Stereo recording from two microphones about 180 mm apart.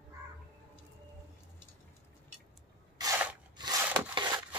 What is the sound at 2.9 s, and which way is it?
Spray, 20° right (ahead or behind).